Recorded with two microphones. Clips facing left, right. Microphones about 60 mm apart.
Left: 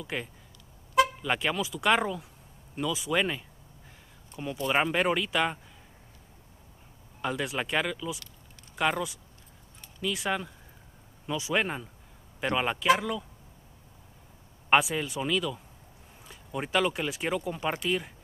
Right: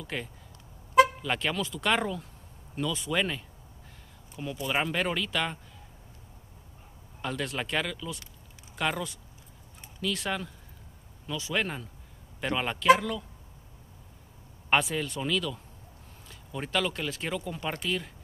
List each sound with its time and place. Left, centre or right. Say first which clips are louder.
0.0 s speech: left 1 dB; centre
4.6 s speech: left 4 dB; centre
7.2 s speech: left 2 dB; centre
14.7 s speech: left 2 dB; centre